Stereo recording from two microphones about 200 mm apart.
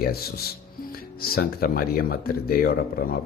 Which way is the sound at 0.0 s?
50° left (ahead or behind).